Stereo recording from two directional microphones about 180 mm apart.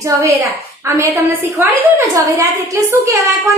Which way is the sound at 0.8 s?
15° right (ahead or behind).